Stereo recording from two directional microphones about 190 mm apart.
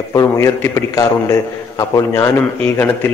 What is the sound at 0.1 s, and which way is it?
A man's voice, 15° left (ahead or behind).